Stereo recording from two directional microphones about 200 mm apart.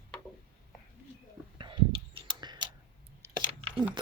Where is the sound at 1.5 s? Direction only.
25° right (ahead or behind).